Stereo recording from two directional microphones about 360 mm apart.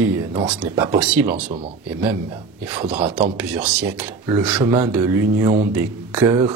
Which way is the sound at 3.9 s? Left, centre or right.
Centre.